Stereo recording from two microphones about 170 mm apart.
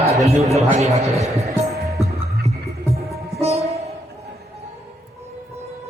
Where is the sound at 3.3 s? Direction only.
40° right (ahead or behind).